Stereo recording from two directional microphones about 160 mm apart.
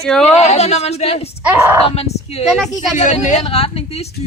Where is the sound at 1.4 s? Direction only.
10° right (ahead or behind).